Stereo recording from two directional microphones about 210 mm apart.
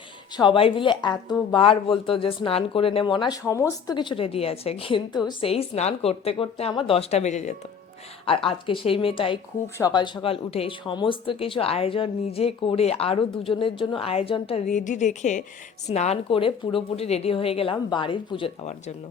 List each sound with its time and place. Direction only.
0.3 s speech: 25° left (ahead or behind)